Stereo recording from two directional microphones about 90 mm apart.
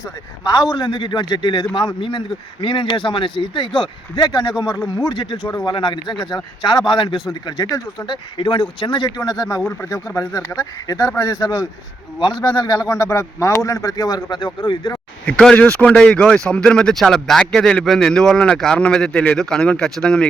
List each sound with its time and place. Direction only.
0.4 s a man's voice: 50° left (ahead or behind); by 6.1 s 65° left (ahead or behind)
6.3 s a man's voice: 50° left (ahead or behind)
8.0 s speech: 65° left (ahead or behind)
9.0 s a man's voice: 45° left (ahead or behind)
12.9 s speech: 30° left (ahead or behind); by 14.9 s 50° left (ahead or behind)
15.3 s speech: 10° left (ahead or behind)